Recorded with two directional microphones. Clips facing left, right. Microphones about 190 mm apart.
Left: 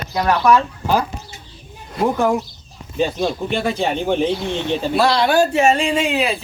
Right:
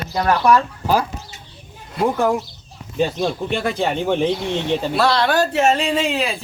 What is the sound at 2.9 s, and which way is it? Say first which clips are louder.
Speech: even; 15° left (ahead or behind).